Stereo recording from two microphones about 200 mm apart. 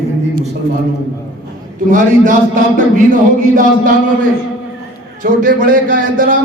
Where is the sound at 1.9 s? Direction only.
40° right (ahead or behind).